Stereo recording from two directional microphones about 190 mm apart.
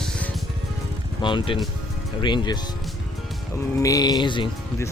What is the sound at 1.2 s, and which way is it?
Music, 25° left (ahead or behind).